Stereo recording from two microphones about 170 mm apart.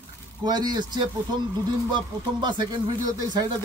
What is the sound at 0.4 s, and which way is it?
Speech, 25° right (ahead or behind).